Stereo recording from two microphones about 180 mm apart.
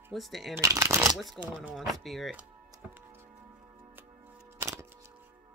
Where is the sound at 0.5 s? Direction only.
15° right (ahead or behind).